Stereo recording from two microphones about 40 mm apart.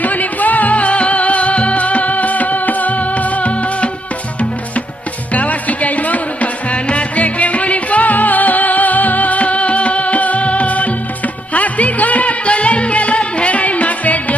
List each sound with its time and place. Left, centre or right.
0.0 s music: left
5.3 s music: left